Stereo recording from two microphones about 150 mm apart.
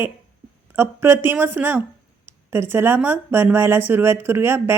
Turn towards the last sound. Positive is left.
turn(degrees=-15)  # may be behind; listen again after turning